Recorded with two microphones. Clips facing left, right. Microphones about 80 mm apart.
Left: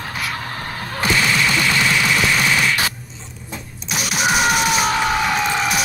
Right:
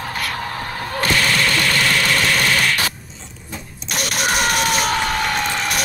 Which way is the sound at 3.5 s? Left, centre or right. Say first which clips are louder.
Even; centre.